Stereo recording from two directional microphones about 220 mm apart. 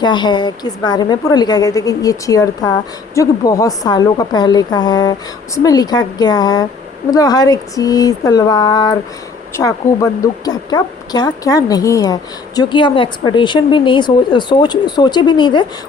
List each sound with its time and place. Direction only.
0.0 s a woman's voice: 20° left (ahead or behind)